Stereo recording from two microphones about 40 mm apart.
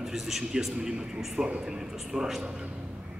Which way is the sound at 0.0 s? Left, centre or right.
Centre.